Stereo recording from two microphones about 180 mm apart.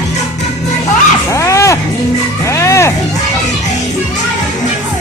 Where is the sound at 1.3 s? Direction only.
15° left (ahead or behind).